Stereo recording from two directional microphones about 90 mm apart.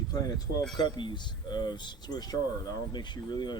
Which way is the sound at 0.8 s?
60° left (ahead or behind).